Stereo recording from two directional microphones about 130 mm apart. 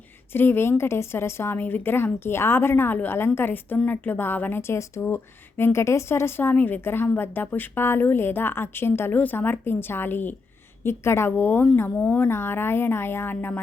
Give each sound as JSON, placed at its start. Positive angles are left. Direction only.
{"t": 0.3, "sound": "a woman's voice", "side_deg": 15}